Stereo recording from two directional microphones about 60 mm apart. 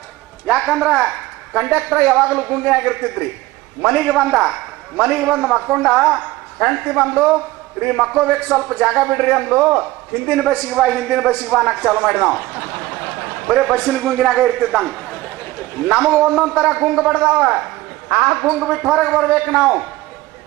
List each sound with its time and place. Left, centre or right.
0.7 s a woman's voice: centre
5.4 s a woman's voice: centre
9.5 s a man's voice: centre
10.2 s a woman's voice: centre
10.5 s a man's voice: left
10.8 s a woman's voice: centre
13.7 s a man's voice: left
14.0 s a man's voice: centre
16.2 s a man's voice: centre
16.5 s a man's voice: centre